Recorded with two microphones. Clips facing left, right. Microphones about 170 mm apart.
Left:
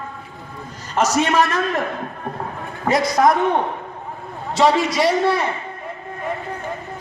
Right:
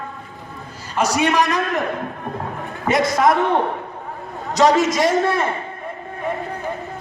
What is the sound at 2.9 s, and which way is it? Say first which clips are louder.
Speech: even; 25° right (ahead or behind).